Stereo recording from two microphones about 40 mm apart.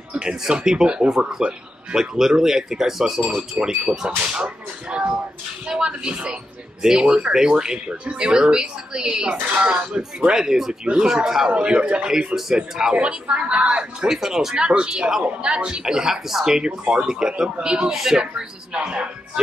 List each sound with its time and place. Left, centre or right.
0.1 s speech: right
4.2 s speech: right
10.3 s speech: centre
12.9 s speech: right
14.0 s speech: centre
14.7 s speech: right
15.2 s speech: right
17.9 s speech: centre
18.2 s speech: right